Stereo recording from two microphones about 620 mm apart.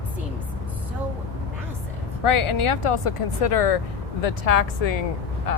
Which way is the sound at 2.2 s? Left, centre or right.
Left.